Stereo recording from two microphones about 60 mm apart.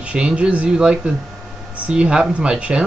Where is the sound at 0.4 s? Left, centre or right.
Right.